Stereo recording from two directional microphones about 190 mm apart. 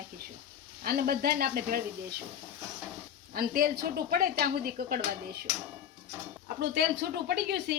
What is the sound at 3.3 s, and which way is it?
A woman's voice, 50° right (ahead or behind).